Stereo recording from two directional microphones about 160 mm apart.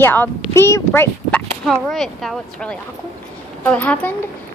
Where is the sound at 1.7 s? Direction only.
Centre (ahead or behind).